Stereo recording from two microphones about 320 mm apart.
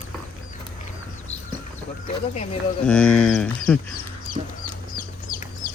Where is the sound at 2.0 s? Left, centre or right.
Left.